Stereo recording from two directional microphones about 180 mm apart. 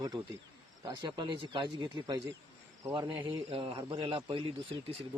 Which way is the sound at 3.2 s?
30° right (ahead or behind).